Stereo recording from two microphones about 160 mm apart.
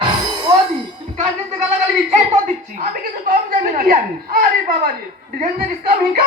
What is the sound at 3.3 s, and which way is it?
A man's voice, 60° right (ahead or behind).